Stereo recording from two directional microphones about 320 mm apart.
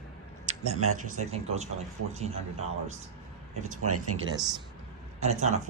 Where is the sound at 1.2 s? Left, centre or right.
Right.